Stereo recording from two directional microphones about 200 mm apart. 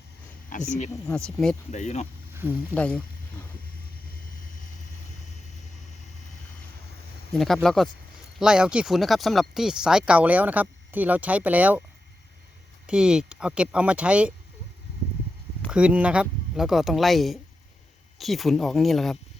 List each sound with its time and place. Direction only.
0.5 s speech: 40° left (ahead or behind)
1.0 s speech: 5° left (ahead or behind)
1.7 s speech: 35° left (ahead or behind)
2.3 s speech: 10° right (ahead or behind)
2.7 s speech: 5° left (ahead or behind)
7.3 s speech: centre (ahead or behind)
12.9 s speech: 5° right (ahead or behind)
15.7 s speech: 5° right (ahead or behind)